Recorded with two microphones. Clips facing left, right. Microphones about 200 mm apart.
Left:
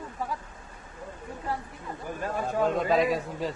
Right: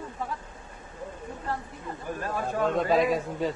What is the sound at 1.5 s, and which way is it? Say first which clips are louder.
Speech: even; 10° left (ahead or behind).